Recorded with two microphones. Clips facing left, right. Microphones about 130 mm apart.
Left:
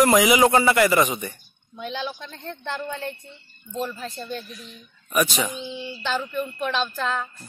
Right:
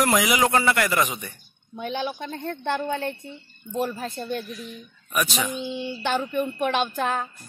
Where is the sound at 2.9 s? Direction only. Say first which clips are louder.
Right 4 dB; 60° right (ahead or behind).